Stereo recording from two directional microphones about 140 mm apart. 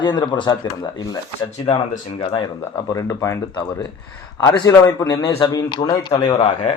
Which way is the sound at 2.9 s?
20° left (ahead or behind).